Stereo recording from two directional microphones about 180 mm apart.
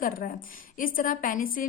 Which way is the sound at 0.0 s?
50° left (ahead or behind).